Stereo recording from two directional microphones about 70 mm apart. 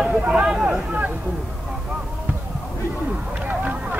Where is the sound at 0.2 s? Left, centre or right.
Centre.